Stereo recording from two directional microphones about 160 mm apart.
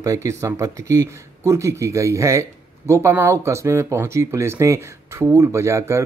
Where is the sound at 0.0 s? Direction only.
20° right (ahead or behind).